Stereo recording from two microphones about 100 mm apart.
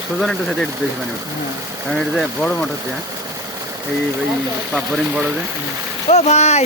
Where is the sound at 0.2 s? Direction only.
5° left (ahead or behind).